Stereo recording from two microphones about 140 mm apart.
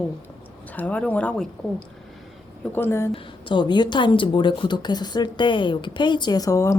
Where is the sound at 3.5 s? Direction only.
30° left (ahead or behind).